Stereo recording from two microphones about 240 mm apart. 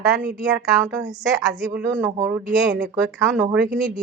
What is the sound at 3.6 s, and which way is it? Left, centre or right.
Speech, right.